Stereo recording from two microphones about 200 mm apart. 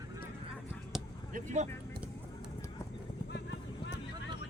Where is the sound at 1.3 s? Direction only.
35° right (ahead or behind).